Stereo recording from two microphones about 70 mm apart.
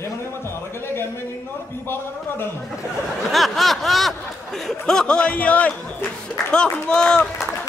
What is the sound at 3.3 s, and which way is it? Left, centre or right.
A man's voice, centre.